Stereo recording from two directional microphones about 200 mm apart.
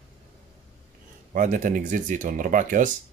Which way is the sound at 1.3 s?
40° right (ahead or behind).